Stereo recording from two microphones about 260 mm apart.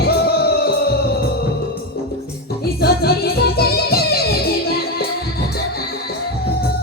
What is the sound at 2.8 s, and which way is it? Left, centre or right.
Music, left.